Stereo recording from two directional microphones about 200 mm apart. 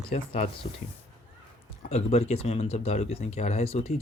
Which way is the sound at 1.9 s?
35° left (ahead or behind).